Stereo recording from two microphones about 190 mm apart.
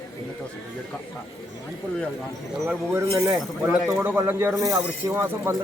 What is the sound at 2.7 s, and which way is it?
A man's voice, 15° right (ahead or behind).